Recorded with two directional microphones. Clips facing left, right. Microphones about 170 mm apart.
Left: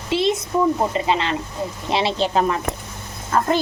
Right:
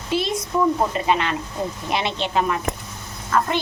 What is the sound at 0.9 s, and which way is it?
Speech, 25° left (ahead or behind).